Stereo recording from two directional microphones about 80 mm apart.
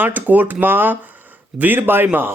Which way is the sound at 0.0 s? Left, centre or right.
Right.